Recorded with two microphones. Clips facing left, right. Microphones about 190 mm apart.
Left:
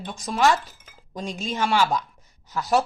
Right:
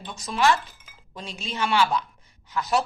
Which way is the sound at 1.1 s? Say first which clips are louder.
Left 5 dB; 45° left (ahead or behind).